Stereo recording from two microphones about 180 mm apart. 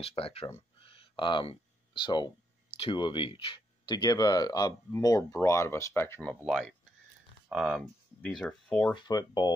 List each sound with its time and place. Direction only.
0.0 s speech: 30° left (ahead or behind)
0.7 s a sound: 30° left (ahead or behind)
2.8 s speech: 25° left (ahead or behind)
6.4 s speech: centre (ahead or behind)
8.9 s speech: 25° left (ahead or behind)